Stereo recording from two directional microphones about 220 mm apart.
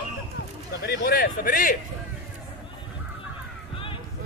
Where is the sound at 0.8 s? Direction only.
45° left (ahead or behind).